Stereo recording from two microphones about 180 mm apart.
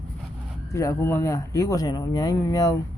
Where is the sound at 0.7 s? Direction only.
15° left (ahead or behind).